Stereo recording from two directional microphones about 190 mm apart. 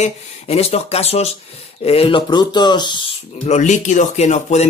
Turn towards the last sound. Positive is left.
turn(degrees=35)  # may be behind; listen again after turning